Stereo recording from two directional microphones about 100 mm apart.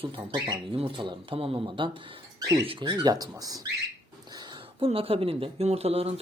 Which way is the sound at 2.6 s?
60° right (ahead or behind).